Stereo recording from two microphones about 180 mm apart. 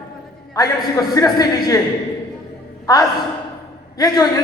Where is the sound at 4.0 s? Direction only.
20° left (ahead or behind).